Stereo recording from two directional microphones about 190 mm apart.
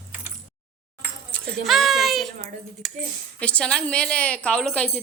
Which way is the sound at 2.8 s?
Centre (ahead or behind).